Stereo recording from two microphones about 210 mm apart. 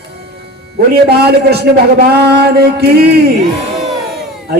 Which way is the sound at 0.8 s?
50° right (ahead or behind).